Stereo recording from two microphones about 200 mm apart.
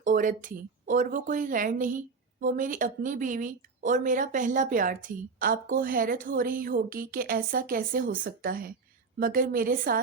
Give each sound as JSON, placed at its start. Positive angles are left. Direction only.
{"t": 0.0, "sound": "speech", "side_deg": -40}